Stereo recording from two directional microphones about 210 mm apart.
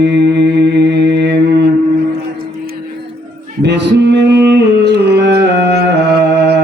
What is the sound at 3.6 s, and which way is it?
Music, 55° right (ahead or behind).